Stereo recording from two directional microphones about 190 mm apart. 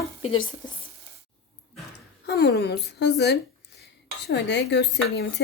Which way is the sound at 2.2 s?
60° left (ahead or behind).